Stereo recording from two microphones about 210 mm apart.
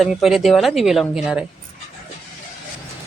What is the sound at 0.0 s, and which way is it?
Speech, centre (ahead or behind).